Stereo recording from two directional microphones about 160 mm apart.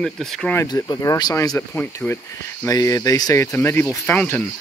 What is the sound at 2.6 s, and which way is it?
Speech, 20° left (ahead or behind).